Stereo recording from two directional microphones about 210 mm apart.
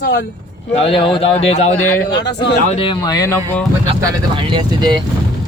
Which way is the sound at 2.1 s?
55° left (ahead or behind).